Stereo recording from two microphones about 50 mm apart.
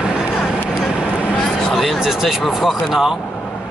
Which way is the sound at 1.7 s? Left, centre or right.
Centre.